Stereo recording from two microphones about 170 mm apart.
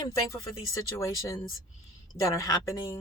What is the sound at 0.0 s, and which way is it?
Speech, 20° left (ahead or behind).